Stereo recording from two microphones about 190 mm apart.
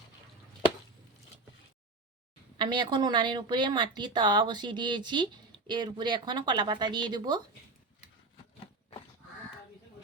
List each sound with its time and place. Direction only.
2.6 s a woman's voice: 25° right (ahead or behind)